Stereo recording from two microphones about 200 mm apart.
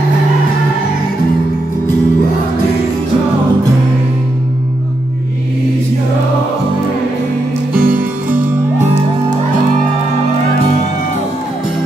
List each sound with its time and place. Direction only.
7.7 s music: 45° right (ahead or behind)